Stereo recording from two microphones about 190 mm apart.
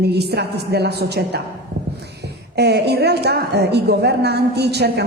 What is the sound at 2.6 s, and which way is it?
A woman's voice, 60° right (ahead or behind).